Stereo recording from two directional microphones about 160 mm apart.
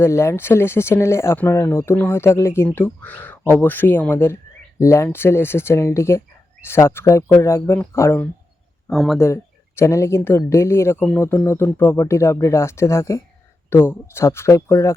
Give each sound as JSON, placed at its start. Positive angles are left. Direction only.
{"t": 0.0, "sound": "speech", "side_deg": 15}
{"t": 8.9, "sound": "speech", "side_deg": 0}
{"t": 9.1, "sound": "speech", "side_deg": 15}